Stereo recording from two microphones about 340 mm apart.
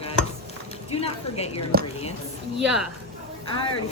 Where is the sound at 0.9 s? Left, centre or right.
Centre.